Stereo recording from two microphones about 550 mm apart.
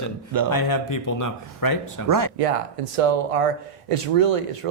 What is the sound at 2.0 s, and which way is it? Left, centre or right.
Speech, right.